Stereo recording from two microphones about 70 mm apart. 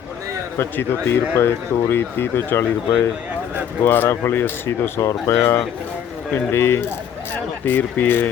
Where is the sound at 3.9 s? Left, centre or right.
Left.